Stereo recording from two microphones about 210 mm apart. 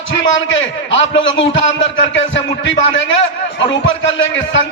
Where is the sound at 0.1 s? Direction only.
65° left (ahead or behind).